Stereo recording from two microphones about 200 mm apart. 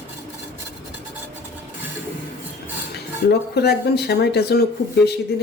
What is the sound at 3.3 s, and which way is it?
Speech, 55° left (ahead or behind).